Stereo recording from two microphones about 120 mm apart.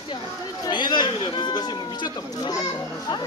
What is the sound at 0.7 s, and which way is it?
Speech, 40° left (ahead or behind).